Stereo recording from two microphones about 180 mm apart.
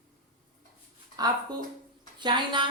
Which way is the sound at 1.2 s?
20° right (ahead or behind).